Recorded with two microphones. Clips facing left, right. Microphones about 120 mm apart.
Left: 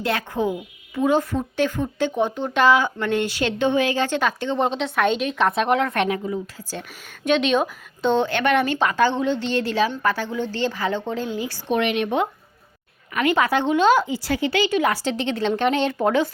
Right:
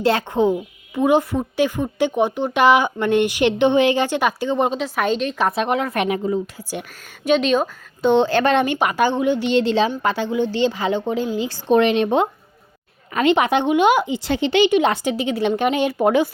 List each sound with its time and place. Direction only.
0.0 s speech: 30° right (ahead or behind); by 6.1 s 10° right (ahead or behind)
7.3 s speech: 5° right (ahead or behind)
8.1 s a woman's voice: 30° right (ahead or behind)
8.6 s a woman's voice: 15° right (ahead or behind)
15.1 s speech: 10° right (ahead or behind)